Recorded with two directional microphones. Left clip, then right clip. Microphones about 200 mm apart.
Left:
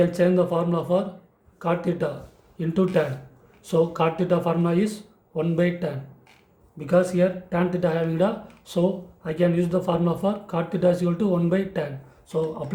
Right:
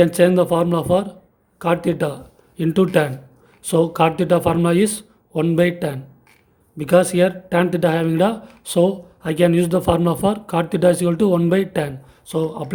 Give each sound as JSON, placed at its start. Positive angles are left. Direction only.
{"t": 0.0, "sound": "speech", "side_deg": -45}